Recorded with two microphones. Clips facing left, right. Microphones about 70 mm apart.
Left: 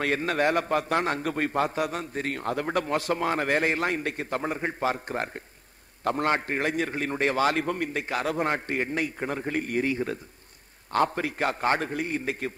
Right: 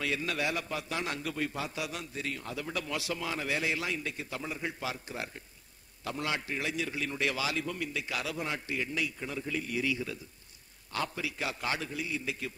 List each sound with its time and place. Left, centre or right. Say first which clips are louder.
0.0 s a man's voice: left 8 dB; left